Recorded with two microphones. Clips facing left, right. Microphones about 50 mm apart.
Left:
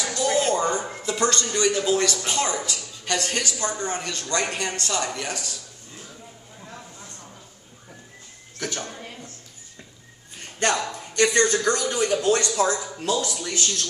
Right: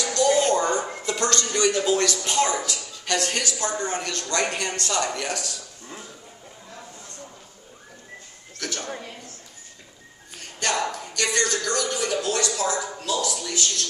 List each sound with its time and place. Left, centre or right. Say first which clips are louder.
0.0 s a sound: right 2 dB; centre
1.9 s speech: even; centre
8.5 s speech: left 2 dB; centre
10.6 s speech: left 1 dB; left